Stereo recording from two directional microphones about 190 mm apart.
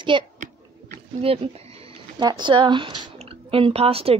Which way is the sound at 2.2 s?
25° right (ahead or behind).